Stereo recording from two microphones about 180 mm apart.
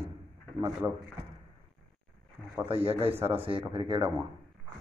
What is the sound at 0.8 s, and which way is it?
Speech, 10° right (ahead or behind).